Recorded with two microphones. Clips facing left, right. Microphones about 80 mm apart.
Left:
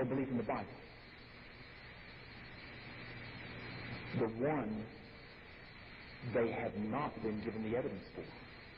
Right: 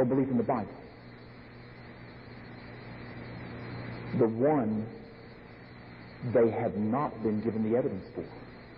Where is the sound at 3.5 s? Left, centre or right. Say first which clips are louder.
Right 6 dB; right.